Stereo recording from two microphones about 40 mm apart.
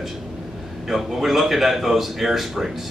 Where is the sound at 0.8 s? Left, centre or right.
Centre.